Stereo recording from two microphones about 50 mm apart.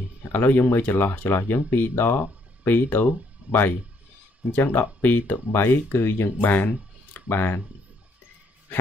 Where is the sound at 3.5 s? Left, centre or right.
Right.